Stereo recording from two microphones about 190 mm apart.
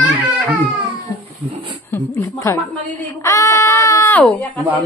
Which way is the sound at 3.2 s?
15° left (ahead or behind).